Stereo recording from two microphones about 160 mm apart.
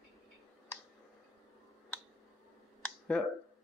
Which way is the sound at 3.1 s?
5° left (ahead or behind).